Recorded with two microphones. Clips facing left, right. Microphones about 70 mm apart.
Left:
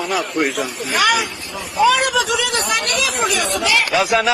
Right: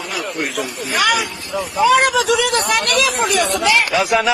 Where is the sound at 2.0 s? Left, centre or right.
Right.